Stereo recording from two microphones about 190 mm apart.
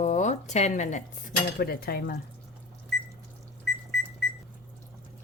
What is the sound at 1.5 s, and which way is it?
Speech, 55° left (ahead or behind).